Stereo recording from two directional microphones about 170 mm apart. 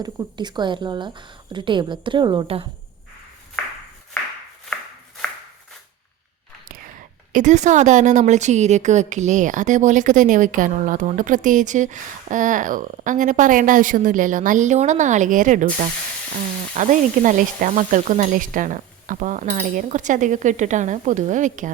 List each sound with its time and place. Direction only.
0.0 s a woman's voice: 25° right (ahead or behind)
7.3 s a woman's voice: 45° right (ahead or behind)